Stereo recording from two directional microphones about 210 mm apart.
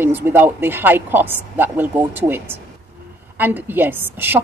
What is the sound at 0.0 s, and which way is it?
A woman's voice, 10° right (ahead or behind).